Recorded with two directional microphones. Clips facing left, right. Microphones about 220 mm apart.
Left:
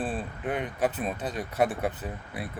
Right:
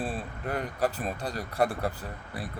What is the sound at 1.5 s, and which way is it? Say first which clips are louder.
Speech: left 1 dB; 20° left (ahead or behind).